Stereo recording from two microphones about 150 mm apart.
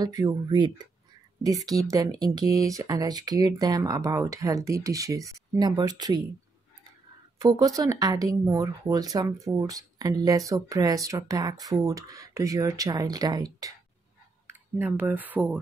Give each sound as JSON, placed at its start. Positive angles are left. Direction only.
{"t": 0.0, "sound": "speech", "side_deg": -25}
{"t": 7.3, "sound": "speech", "side_deg": -25}
{"t": 14.5, "sound": "speech", "side_deg": -15}